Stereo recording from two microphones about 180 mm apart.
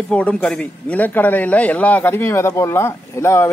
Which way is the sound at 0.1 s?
5° left (ahead or behind).